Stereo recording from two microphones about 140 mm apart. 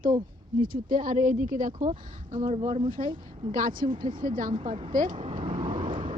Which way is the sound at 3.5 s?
75° right (ahead or behind).